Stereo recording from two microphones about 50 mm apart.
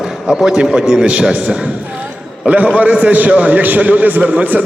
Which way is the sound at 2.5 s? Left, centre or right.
Right.